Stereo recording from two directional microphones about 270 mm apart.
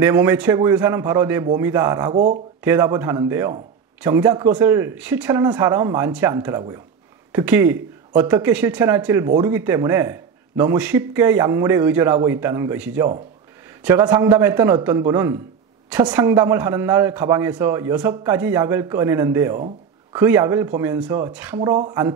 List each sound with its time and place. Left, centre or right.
0.0 s speech: centre
21.5 s speech: centre